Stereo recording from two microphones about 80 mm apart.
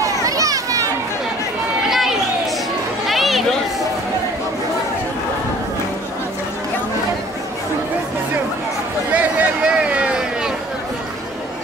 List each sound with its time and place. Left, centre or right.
0.0 s children playing: right
1.9 s run: centre
3.1 s chatter: centre
9.1 s a sound: centre